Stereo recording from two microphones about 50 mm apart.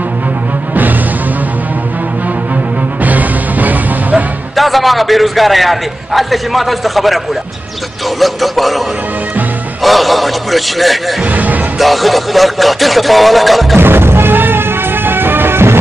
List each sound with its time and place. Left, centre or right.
3.0 s music: right
4.6 s a man's voice: centre
8.2 s a man's voice: centre
9.8 s a man's voice: centre
11.3 s music: right
11.8 s a man's voice: centre
13.7 s music: right